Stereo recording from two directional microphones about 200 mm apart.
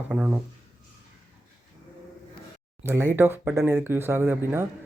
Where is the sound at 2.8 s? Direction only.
10° right (ahead or behind).